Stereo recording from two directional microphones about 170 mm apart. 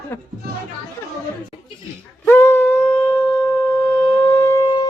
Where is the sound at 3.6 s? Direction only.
10° left (ahead or behind).